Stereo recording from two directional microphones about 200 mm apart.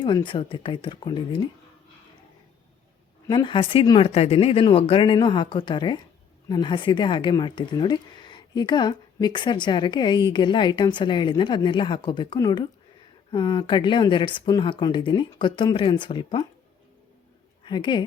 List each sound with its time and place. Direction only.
0.0 s speech: 25° left (ahead or behind)
3.2 s speech: 20° left (ahead or behind)
17.7 s speech: 20° left (ahead or behind)